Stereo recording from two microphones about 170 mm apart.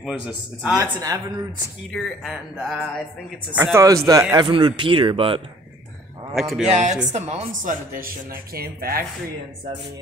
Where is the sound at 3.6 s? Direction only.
15° right (ahead or behind); by 5.5 s 30° right (ahead or behind).